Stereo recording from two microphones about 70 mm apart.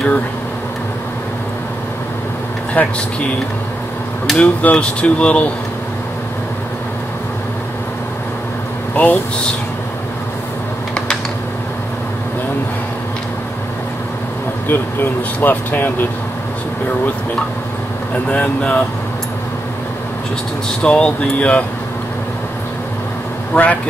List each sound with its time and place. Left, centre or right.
2.7 s speech: left
4.4 s speech: centre
8.9 s speech: left
14.7 s speech: left
18.3 s speech: centre
20.8 s speech: centre
23.5 s speech: left